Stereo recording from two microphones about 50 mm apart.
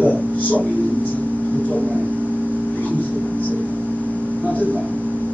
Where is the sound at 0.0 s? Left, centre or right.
Left.